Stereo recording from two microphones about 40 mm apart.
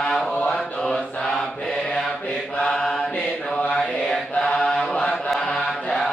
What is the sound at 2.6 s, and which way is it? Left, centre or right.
Mantra, centre.